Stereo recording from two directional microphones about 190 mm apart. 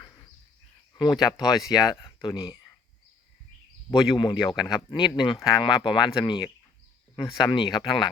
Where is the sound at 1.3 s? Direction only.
20° left (ahead or behind).